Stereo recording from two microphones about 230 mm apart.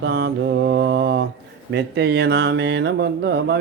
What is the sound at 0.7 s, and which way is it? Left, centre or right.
Mantra, right.